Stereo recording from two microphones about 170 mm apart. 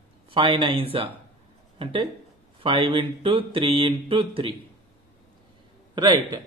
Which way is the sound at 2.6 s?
30° right (ahead or behind).